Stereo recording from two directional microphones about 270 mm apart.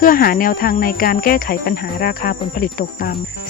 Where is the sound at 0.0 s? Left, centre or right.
Left.